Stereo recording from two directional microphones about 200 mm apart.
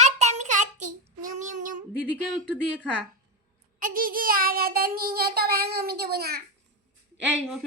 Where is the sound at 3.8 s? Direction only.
45° right (ahead or behind).